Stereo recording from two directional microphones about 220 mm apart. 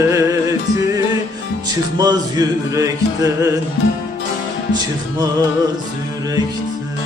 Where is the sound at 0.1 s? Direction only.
15° right (ahead or behind).